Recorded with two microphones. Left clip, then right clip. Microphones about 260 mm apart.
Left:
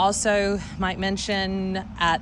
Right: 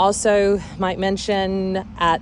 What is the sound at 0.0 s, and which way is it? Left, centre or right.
Speech, centre.